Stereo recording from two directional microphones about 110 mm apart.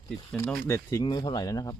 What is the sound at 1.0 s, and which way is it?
Speech, 40° left (ahead or behind).